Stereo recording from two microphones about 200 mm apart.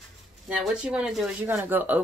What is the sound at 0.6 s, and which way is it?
Speech, 5° right (ahead or behind).